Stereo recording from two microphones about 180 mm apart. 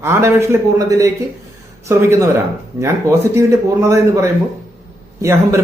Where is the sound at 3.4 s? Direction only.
15° right (ahead or behind).